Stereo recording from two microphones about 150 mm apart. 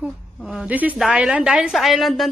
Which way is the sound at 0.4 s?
Centre (ahead or behind).